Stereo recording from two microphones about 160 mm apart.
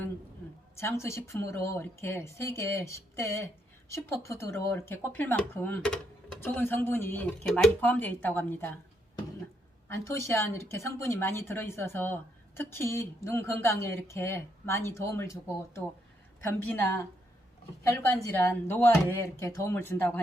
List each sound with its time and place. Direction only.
0.8 s a woman's voice: 15° left (ahead or behind)
9.9 s a woman's voice: 15° left (ahead or behind)